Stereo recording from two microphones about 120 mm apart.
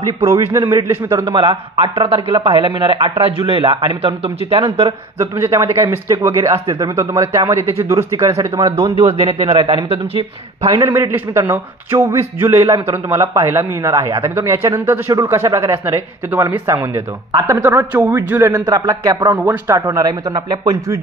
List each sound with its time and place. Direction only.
0.5 s a man's voice: 20° right (ahead or behind)
1.2 s a man's voice: 40° right (ahead or behind)
5.2 s a man's voice: 25° right (ahead or behind)
8.7 s a man's voice: 50° right (ahead or behind)
10.9 s a man's voice: 15° right (ahead or behind)
17.3 s speech: 30° right (ahead or behind)
17.6 s speech: 15° right (ahead or behind)
18.7 s a man's voice: 30° right (ahead or behind)
19.3 s speech: 15° right (ahead or behind)
19.7 s a man's voice: 30° right (ahead or behind)